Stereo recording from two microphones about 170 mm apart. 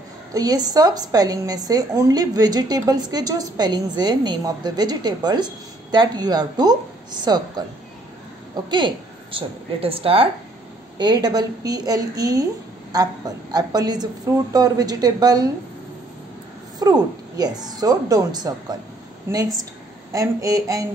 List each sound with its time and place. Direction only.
0.3 s a woman's voice: 20° right (ahead or behind)
8.6 s a woman's voice: 25° right (ahead or behind)
16.8 s a woman's voice: 20° right (ahead or behind)